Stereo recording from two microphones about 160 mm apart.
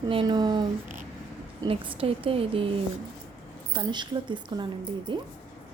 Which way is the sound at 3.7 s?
30° right (ahead or behind).